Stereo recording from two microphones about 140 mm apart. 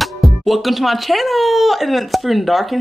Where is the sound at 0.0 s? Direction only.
Centre (ahead or behind).